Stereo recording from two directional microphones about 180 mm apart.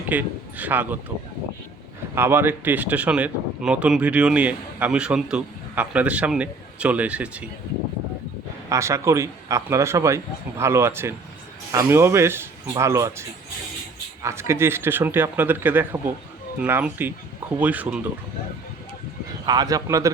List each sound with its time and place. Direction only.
0.1 s speech: 10° right (ahead or behind)
2.1 s speech: 10° right (ahead or behind)
8.7 s speech: 15° right (ahead or behind)
19.5 s a man's voice: 20° right (ahead or behind)